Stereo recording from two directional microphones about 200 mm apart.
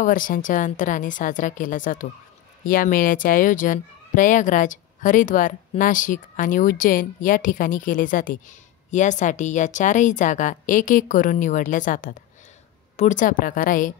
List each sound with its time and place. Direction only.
0.0 s speech: 40° left (ahead or behind)